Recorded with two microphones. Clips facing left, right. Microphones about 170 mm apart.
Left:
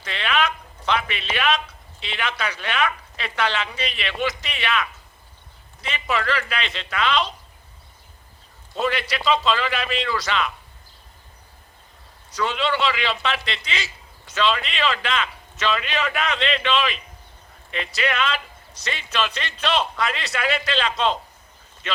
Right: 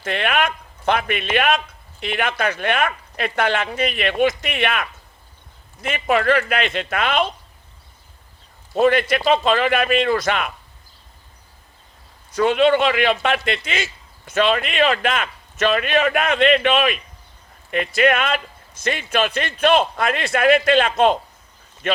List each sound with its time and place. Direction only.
0.0 s a man's voice: 50° right (ahead or behind)
8.7 s a man's voice: 50° right (ahead or behind)
12.3 s a man's voice: 50° right (ahead or behind)